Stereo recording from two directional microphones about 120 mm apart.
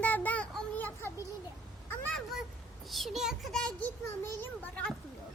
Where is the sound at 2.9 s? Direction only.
Centre (ahead or behind).